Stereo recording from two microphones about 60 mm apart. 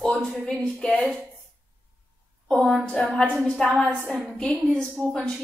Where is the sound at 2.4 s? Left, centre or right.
Centre.